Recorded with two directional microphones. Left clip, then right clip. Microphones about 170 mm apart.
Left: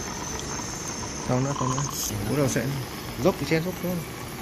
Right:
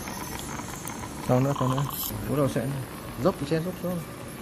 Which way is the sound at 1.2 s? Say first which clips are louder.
Right 2 dB; 40° right (ahead or behind).